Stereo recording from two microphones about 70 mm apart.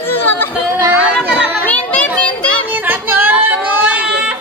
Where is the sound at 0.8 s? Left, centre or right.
Right.